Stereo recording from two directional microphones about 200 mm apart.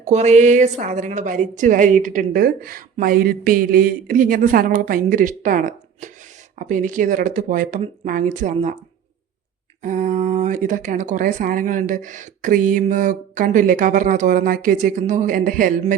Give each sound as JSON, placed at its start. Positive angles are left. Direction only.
{"t": 0.0, "sound": "a woman's voice", "side_deg": -35}
{"t": 9.8, "sound": "speech", "side_deg": -40}